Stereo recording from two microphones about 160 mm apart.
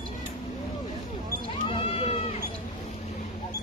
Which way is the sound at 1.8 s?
35° left (ahead or behind).